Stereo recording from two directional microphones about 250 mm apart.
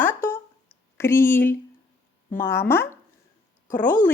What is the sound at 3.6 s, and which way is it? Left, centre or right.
Speech, left.